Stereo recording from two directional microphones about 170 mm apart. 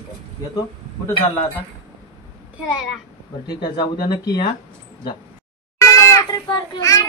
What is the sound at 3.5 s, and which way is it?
Speech, 25° left (ahead or behind).